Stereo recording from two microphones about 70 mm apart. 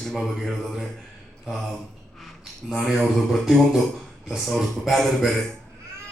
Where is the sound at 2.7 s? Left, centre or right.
Centre.